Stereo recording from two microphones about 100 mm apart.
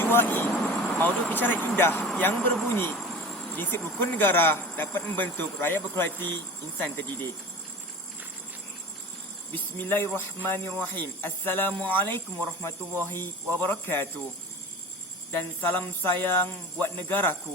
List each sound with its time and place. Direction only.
0.0 s speech: 20° left (ahead or behind)
9.5 s speech: 20° left (ahead or behind)
15.3 s speech: 20° left (ahead or behind)